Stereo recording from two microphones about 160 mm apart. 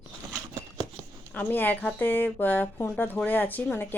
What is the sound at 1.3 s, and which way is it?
Speech, 10° left (ahead or behind).